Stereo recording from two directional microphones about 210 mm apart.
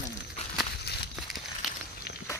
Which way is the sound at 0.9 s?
50° left (ahead or behind).